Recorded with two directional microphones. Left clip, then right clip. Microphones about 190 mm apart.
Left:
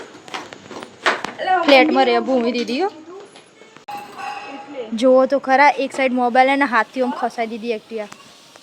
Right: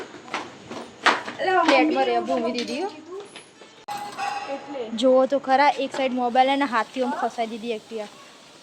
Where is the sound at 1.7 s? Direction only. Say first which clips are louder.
Left 7 dB; 45° left (ahead or behind).